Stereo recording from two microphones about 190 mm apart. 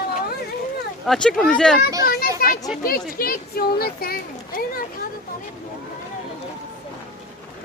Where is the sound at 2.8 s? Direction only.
50° left (ahead or behind).